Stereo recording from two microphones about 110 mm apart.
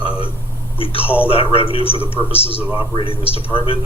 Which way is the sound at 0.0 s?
55° left (ahead or behind).